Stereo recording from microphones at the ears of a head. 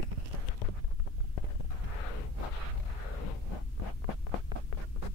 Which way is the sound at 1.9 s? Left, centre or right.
Left.